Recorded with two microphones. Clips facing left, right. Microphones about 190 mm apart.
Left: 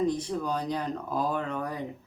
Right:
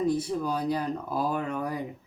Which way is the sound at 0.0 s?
10° right (ahead or behind).